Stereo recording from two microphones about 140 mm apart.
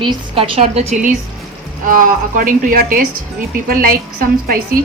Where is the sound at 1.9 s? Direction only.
80° right.